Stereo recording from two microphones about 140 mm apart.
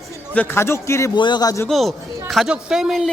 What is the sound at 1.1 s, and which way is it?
Speech, 35° left (ahead or behind).